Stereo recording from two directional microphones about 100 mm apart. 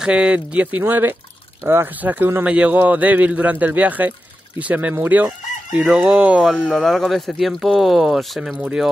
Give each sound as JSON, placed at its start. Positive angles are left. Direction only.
{"t": 0.0, "sound": "a man's voice", "side_deg": -10}
{"t": 4.9, "sound": "chicken", "side_deg": -20}